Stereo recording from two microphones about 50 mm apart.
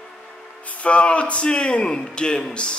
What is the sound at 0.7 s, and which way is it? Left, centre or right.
A man's voice, left.